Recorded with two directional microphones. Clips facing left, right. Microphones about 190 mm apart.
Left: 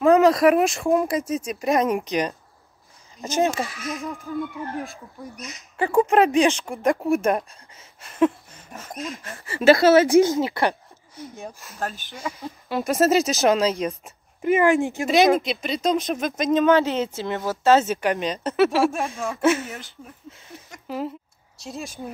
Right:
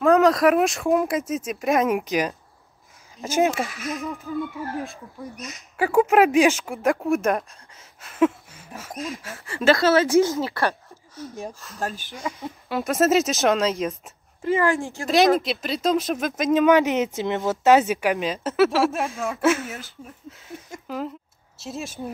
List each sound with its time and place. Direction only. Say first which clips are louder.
0.0 s speech: left 1 dB; centre (ahead or behind)
9.5 s speech: left 4 dB; 5° left (ahead or behind)
12.2 s speech: even; 15° right (ahead or behind)
12.6 s speech: left 1 dB; centre (ahead or behind)
14.4 s speech: left 3 dB; 15° left (ahead or behind)
15.0 s speech: even; centre (ahead or behind)